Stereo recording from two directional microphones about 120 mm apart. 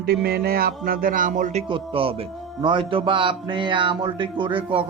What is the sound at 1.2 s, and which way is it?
Speech, 90° right.